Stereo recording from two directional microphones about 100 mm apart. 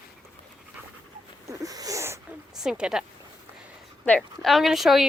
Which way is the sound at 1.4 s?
35° right (ahead or behind).